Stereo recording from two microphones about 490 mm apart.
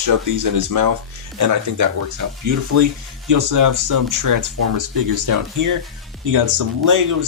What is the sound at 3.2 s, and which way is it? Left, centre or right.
Speech, right.